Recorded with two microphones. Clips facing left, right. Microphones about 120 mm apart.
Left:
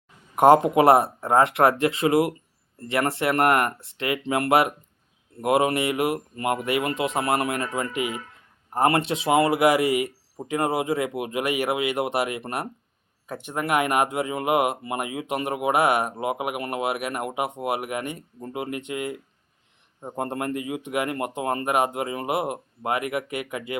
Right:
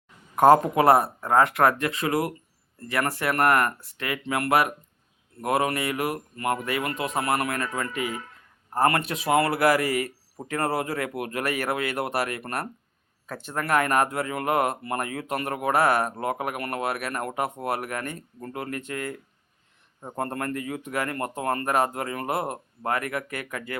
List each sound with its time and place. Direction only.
0.3 s speech: 25° left (ahead or behind)